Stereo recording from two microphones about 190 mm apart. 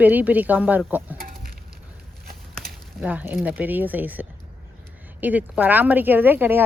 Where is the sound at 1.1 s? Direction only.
50° right (ahead or behind).